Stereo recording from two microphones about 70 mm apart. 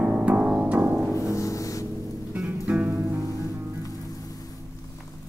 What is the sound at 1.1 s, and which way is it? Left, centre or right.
Music, left.